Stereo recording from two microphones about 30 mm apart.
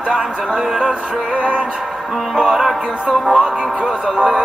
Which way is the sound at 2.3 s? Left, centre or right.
Right.